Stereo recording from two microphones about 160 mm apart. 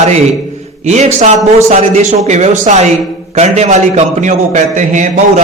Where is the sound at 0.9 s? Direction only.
45° right (ahead or behind).